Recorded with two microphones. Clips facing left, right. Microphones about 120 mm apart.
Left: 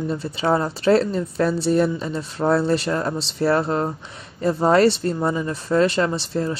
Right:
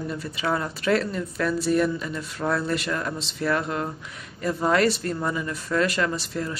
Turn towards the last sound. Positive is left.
turn(degrees=30)  # may be behind; listen again after turning